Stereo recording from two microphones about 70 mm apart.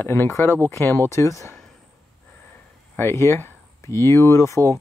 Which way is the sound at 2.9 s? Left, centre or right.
Left.